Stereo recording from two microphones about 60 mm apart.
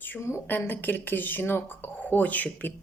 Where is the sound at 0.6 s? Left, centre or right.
Left.